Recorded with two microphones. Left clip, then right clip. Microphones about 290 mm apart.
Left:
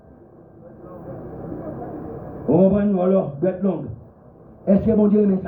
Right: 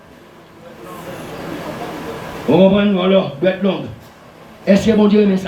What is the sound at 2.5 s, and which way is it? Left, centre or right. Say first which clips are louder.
A man's voice: right 5 dB; right.